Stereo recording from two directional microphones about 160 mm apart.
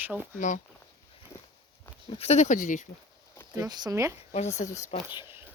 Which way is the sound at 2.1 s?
40° left (ahead or behind).